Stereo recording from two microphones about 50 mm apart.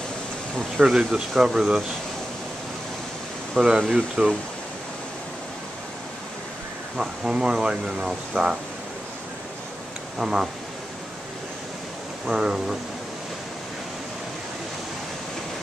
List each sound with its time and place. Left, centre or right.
0.7 s speech: centre
3.5 s speech: centre
7.0 s speech: centre
10.1 s speech: centre
12.3 s speech: centre